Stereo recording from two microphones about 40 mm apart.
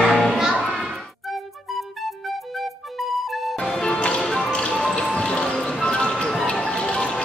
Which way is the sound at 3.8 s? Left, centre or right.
Left.